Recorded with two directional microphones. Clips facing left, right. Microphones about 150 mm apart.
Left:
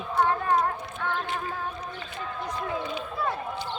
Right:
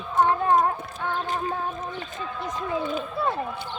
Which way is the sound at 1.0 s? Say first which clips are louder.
Right 2 dB; 40° right (ahead or behind).